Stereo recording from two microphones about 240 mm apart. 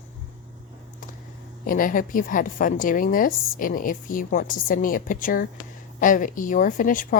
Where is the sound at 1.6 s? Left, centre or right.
Left.